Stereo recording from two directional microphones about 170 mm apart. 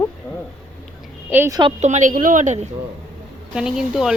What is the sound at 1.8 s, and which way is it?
Speech, 45° right (ahead or behind).